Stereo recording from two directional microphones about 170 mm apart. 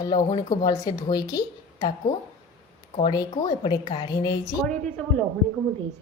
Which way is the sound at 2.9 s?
30° left (ahead or behind).